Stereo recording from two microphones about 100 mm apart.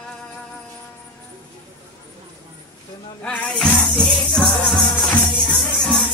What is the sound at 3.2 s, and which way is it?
Music, 10° left (ahead or behind).